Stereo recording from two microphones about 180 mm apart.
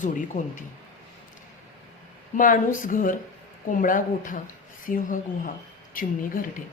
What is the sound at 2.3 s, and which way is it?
Speech, 45° left (ahead or behind).